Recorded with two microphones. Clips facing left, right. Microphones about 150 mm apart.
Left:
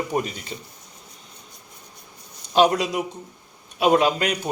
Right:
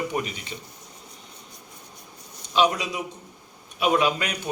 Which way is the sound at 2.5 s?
45° left (ahead or behind).